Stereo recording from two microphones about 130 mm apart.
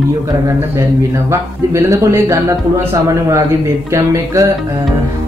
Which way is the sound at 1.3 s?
25° right (ahead or behind).